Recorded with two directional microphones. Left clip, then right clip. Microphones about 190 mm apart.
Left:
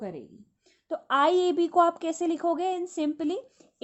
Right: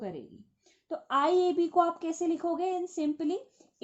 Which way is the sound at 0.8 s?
30° left (ahead or behind).